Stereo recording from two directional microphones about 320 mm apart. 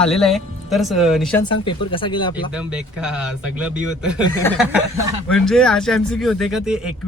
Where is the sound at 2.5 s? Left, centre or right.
Centre.